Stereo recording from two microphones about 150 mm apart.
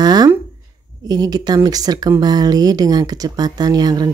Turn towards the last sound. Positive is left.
turn(degrees=-25)  # may be behind; listen again after turning